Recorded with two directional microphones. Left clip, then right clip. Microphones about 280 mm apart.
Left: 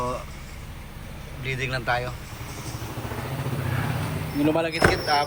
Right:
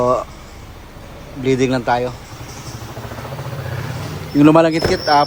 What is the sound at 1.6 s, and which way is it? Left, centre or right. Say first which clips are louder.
Speech: right 6 dB; centre.